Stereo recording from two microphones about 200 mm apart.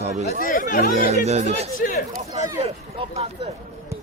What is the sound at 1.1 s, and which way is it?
Speech, 35° right (ahead or behind).